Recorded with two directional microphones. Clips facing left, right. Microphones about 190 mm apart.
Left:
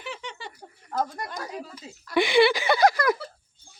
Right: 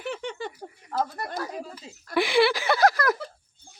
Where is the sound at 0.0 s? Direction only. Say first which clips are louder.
Right 6 dB; 55° right (ahead or behind).